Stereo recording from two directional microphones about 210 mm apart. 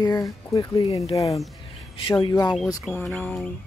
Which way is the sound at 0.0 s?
15° left (ahead or behind).